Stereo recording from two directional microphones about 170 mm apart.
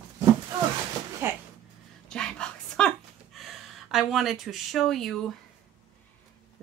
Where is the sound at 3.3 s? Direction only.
Centre (ahead or behind).